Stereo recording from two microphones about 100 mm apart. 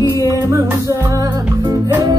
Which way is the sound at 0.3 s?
30° right (ahead or behind).